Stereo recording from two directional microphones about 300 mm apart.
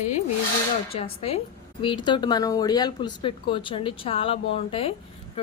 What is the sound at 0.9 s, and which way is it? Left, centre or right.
A woman's voice, centre.